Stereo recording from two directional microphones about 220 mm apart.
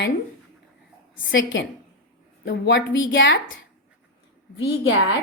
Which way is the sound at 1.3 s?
55° left (ahead or behind).